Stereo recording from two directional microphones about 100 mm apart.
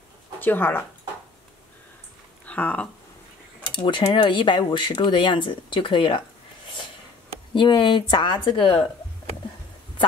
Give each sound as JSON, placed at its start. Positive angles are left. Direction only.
{"t": 0.4, "sound": "speech", "side_deg": 20}
{"t": 2.4, "sound": "speech", "side_deg": 15}
{"t": 3.7, "sound": "speech", "side_deg": 55}
{"t": 7.5, "sound": "speech", "side_deg": 55}